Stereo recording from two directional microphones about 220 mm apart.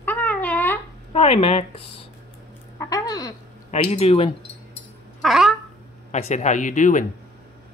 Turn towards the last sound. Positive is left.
turn(degrees=35)  # may be behind; listen again after turning